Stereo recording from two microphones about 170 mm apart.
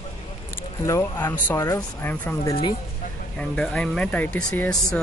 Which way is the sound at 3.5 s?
5° left (ahead or behind).